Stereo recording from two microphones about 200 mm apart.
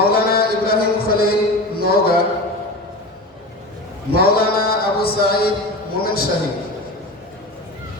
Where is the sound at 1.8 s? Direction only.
50° left (ahead or behind).